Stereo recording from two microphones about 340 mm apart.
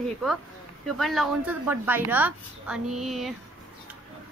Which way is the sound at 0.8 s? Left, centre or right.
Centre.